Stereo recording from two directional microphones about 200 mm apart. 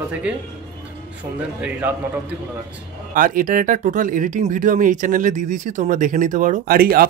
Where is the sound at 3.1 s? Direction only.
45° right (ahead or behind).